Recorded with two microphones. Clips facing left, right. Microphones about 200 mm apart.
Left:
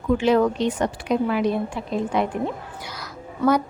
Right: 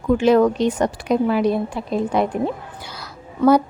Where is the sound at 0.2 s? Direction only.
45° right (ahead or behind).